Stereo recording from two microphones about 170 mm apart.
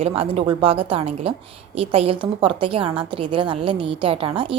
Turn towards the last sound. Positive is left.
turn(degrees=-30)  # may be behind; listen again after turning